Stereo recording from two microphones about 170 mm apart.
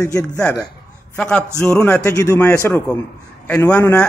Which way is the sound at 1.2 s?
5° left (ahead or behind).